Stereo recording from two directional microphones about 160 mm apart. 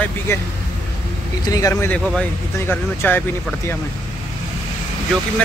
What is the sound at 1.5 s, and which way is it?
Speech, 20° left (ahead or behind).